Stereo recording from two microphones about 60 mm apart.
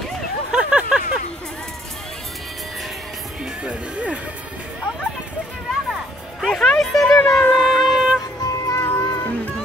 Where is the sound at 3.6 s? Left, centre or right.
Right.